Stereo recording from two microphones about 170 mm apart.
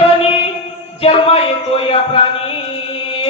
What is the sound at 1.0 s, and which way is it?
A man's voice, 35° left (ahead or behind).